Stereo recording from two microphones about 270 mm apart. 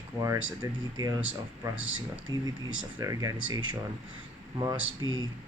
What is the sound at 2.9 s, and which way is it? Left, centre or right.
Speech, centre.